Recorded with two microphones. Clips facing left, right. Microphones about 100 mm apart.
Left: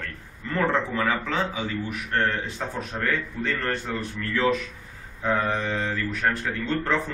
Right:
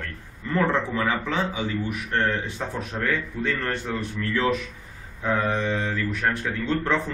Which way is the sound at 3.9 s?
15° right (ahead or behind).